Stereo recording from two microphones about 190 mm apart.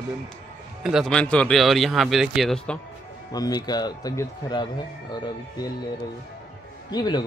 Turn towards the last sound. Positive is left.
turn(degrees=20)  # may be behind; listen again after turning